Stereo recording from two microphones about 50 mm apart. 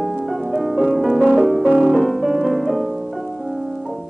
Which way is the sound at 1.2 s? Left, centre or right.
Centre.